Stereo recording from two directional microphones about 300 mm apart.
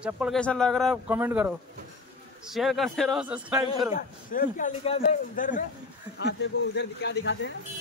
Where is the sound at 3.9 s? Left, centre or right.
Left.